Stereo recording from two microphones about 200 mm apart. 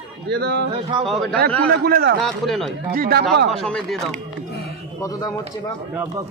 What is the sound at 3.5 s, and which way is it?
Speech, centre (ahead or behind).